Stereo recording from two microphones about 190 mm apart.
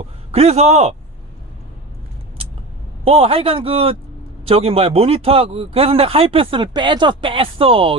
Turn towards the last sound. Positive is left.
turn(degrees=-30)  # may be behind; listen again after turning